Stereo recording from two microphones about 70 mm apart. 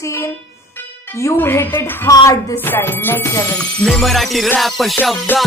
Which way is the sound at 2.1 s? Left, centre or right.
Left.